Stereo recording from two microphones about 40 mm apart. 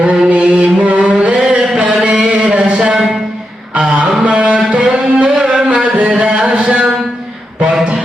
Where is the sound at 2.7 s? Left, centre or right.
Right.